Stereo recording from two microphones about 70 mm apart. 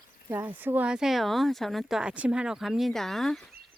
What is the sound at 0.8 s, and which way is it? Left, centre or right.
Speech, centre.